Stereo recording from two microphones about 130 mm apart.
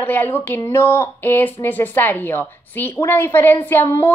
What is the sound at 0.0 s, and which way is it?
Speech, 15° left (ahead or behind).